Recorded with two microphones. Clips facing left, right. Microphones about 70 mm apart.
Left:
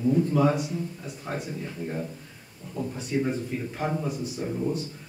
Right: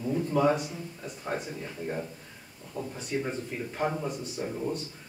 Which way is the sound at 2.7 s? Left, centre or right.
Centre.